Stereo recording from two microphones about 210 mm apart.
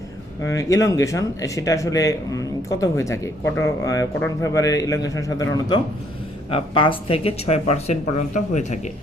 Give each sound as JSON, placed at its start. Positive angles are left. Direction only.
{"t": 0.4, "sound": "speech", "side_deg": 15}